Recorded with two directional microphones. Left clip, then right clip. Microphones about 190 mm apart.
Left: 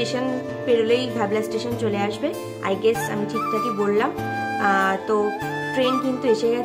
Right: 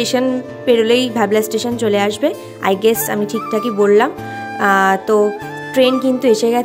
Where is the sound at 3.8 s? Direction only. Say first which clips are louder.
Right 13 dB; 40° right (ahead or behind).